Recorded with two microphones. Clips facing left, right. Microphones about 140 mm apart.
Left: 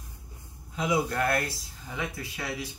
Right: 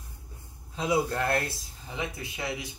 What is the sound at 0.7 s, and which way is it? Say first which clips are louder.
Speech: even; 30° right (ahead or behind).